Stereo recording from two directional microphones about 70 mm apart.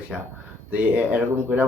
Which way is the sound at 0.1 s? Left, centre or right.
Centre.